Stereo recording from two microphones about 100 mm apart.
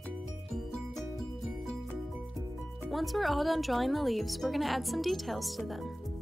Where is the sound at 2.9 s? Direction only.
Centre (ahead or behind).